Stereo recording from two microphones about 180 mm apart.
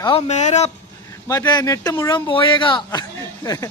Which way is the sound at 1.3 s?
20° left (ahead or behind).